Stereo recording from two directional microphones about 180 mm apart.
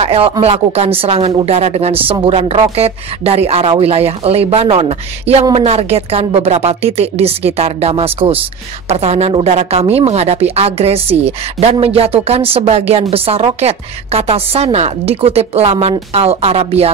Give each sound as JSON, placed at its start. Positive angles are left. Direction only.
{"t": 0.0, "sound": "speech", "side_deg": -35}